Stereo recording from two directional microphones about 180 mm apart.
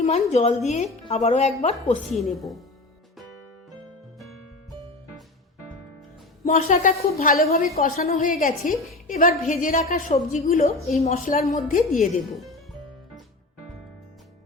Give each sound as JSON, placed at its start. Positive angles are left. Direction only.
{"t": 0.0, "sound": "a woman's voice", "side_deg": 35}
{"t": 2.0, "sound": "a woman's voice", "side_deg": 0}
{"t": 6.4, "sound": "a woman's voice", "side_deg": 40}